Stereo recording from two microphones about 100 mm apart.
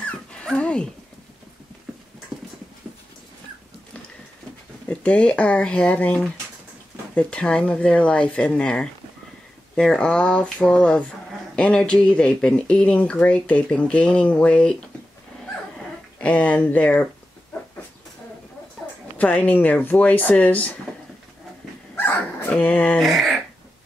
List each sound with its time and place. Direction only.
0.0 s dog: 10° left (ahead or behind)
4.8 s speech: 10° left (ahead or behind)
16.2 s speech: 15° left (ahead or behind)
19.1 s speech: 15° left (ahead or behind)
21.9 s dog: 20° left (ahead or behind)
23.0 s speech: centre (ahead or behind)